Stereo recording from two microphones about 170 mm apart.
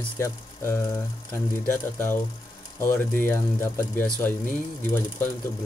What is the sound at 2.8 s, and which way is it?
Speech, 15° left (ahead or behind).